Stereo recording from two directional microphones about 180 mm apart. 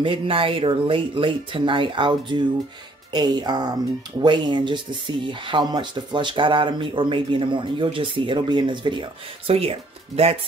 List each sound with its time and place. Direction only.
0.0 s speech: 30° right (ahead or behind)